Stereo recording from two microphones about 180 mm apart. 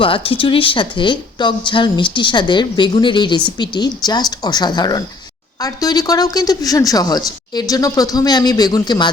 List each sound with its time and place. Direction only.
0.0 s speech: 30° left (ahead or behind)